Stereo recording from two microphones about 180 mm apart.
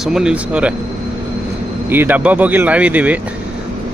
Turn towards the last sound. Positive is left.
turn(degrees=-10)  # may be behind; listen again after turning